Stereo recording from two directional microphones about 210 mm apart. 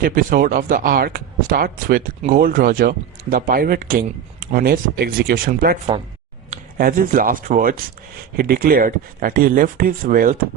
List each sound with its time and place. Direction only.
0.0 s speech: 40° right (ahead or behind)